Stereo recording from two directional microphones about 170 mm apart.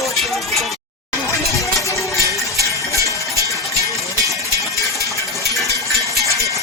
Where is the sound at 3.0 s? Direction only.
20° right (ahead or behind).